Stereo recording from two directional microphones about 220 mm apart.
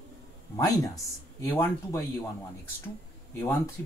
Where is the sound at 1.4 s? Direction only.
10° left (ahead or behind).